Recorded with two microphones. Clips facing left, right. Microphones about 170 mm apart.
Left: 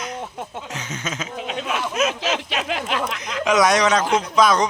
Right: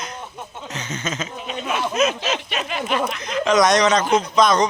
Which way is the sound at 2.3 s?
90° left.